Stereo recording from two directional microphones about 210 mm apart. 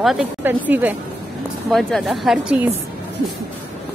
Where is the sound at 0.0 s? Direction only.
5° right (ahead or behind).